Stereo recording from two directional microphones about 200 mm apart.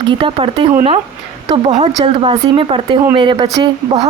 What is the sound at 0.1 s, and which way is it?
Speech, 25° right (ahead or behind).